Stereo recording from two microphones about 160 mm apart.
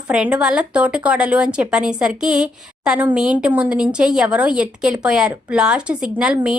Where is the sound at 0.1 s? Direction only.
10° right (ahead or behind).